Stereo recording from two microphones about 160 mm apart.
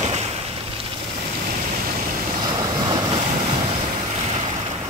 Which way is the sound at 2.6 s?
30° right (ahead or behind).